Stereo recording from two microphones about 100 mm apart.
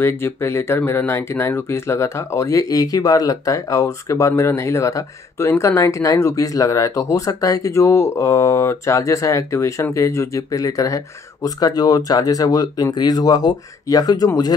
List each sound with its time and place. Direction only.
0.0 s speech: 25° left (ahead or behind)